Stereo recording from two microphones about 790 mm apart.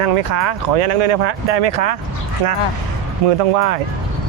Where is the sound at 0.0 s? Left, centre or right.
Right.